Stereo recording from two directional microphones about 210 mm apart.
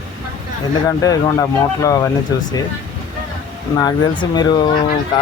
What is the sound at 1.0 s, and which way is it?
Speech, 15° left (ahead or behind).